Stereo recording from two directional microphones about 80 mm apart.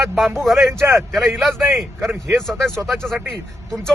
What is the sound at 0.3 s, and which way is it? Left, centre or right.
Speech, centre.